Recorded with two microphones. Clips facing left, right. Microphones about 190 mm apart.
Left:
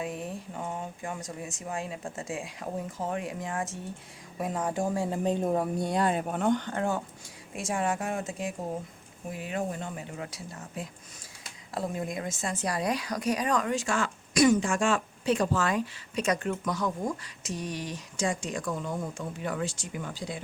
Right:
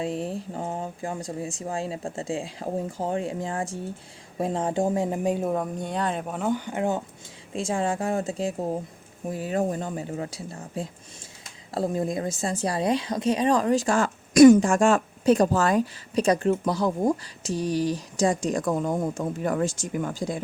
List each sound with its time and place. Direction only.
0.0 s speech: 30° right (ahead or behind); by 5.5 s 10° right (ahead or behind)
5.9 s speech: 10° left (ahead or behind); by 7.0 s 15° right (ahead or behind)
7.5 s speech: 25° right (ahead or behind); by 20.4 s 45° right (ahead or behind)